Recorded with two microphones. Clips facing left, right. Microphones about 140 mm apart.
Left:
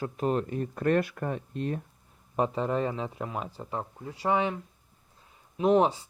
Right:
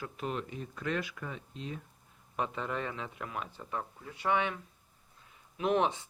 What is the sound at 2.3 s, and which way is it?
A man's voice, 35° left (ahead or behind).